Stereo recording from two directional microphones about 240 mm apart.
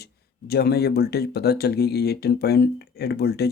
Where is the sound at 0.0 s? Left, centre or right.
Left.